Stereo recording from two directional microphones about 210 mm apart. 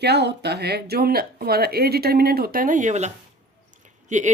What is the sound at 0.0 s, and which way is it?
Speech, 50° right (ahead or behind).